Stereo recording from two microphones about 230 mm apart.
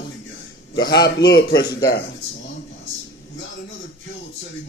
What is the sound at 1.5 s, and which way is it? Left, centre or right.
Speech, centre.